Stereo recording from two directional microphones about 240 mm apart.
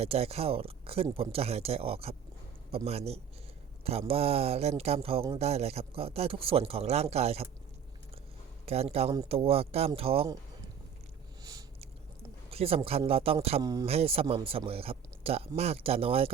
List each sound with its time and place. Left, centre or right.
0.0 s speech: right
8.6 s speech: right
11.4 s a sound: centre
12.5 s speech: right